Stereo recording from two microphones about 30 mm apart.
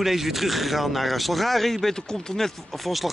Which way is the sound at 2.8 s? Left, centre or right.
Centre.